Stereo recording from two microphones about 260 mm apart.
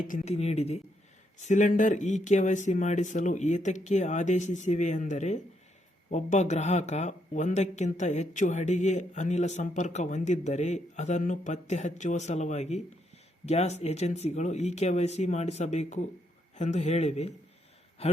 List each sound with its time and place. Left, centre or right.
0.1 s a man's voice: left